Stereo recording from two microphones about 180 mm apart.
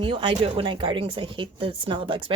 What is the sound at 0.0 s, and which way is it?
Speech, 30° right (ahead or behind).